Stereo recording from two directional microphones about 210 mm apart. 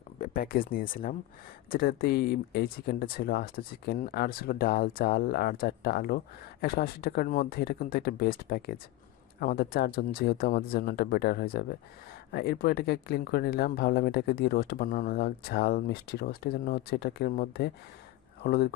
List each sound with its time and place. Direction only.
0.2 s speech: 45° left (ahead or behind)